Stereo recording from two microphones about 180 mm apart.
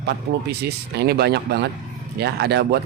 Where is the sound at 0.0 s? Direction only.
65° right (ahead or behind).